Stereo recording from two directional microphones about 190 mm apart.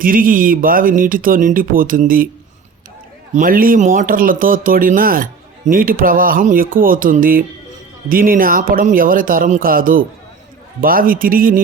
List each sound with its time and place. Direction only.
0.0 s speech: 45° right (ahead or behind)
3.3 s speech: 50° right (ahead or behind)